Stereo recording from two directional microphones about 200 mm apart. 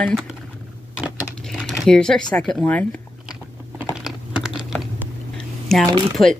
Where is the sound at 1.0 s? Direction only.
5° right (ahead or behind).